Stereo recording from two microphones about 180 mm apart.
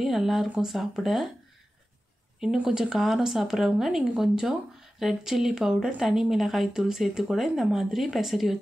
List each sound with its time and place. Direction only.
0.0 s speech: centre (ahead or behind)
2.4 s speech: 5° right (ahead or behind)